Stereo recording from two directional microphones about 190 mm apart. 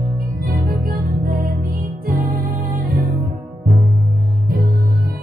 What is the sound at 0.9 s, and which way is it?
Music, 50° right (ahead or behind).